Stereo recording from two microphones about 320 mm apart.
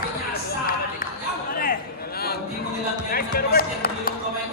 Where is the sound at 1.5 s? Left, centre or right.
Left.